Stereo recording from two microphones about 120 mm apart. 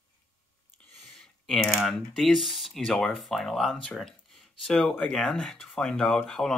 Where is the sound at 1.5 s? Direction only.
Centre (ahead or behind).